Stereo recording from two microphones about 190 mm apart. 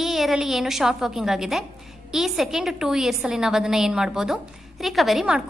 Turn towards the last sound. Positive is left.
turn(degrees=0)  # may be behind; listen again after turning